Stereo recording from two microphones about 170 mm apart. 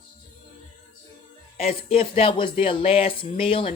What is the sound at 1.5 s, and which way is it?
Speech, 35° left (ahead or behind).